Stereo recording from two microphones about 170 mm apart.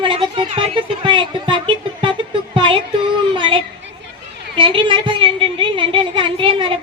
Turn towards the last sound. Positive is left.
turn(degrees=-30)  # may be behind; listen again after turning